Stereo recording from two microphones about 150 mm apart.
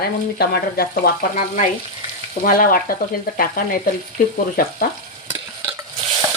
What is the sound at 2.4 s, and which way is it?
Frying, 70° left (ahead or behind).